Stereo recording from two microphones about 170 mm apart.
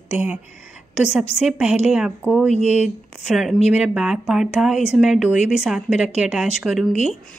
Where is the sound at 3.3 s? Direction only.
Centre (ahead or behind).